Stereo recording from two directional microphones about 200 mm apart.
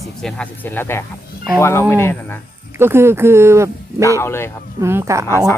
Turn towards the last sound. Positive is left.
turn(degrees=15)  # may be behind; listen again after turning